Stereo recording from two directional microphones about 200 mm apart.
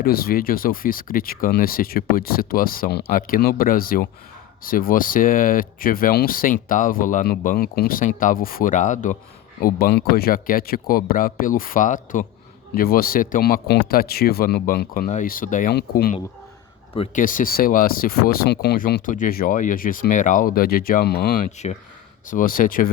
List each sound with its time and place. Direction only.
0.0 s speech: 50° left (ahead or behind)
9.6 s speech: 50° left (ahead or behind)
17.2 s speech: 45° left (ahead or behind)
21.6 s speech: 35° left (ahead or behind)